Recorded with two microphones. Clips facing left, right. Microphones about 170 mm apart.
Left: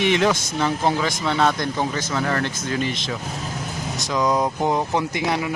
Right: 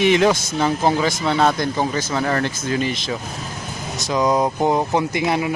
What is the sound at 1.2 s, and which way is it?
Vehicle, 35° right (ahead or behind).